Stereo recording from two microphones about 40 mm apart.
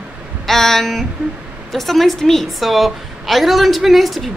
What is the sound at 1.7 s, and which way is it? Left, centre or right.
Speech, centre.